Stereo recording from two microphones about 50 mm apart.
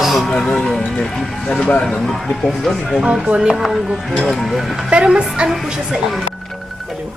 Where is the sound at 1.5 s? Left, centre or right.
Left.